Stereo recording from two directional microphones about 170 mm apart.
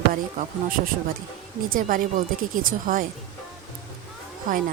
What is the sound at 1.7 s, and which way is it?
Speech, 55° right (ahead or behind).